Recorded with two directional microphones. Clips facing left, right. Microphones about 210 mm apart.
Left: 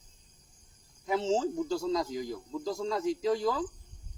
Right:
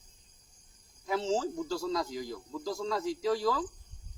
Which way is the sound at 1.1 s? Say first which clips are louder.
Left 2 dB; 20° left (ahead or behind).